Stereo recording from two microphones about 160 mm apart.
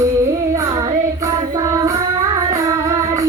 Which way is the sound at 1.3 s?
20° right (ahead or behind).